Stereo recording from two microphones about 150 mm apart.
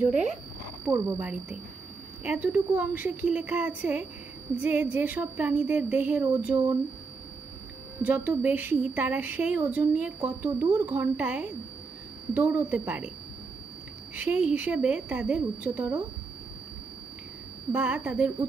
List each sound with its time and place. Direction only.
0.0 s speech: 5° right (ahead or behind)
0.8 s speech: 20° right (ahead or behind)
2.2 s speech: 10° right (ahead or behind)
8.0 s speech: 10° right (ahead or behind)
14.1 s speech: 10° right (ahead or behind)
17.7 s speech: 10° right (ahead or behind)